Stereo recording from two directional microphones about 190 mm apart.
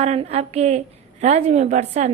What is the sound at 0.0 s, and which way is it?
A woman's voice, 35° right (ahead or behind).